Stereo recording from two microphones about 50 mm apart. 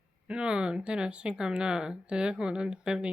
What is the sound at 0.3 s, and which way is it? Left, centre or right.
Speech, centre.